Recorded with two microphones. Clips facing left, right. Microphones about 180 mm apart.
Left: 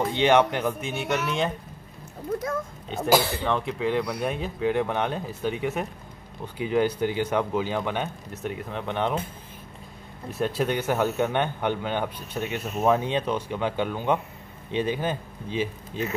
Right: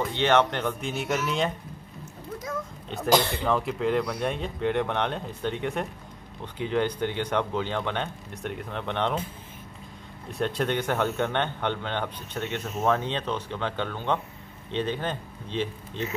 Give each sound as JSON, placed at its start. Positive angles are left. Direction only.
{"t": 0.1, "sound": "speech", "side_deg": 15}
{"t": 2.9, "sound": "speech", "side_deg": 5}
{"t": 10.3, "sound": "speech", "side_deg": 5}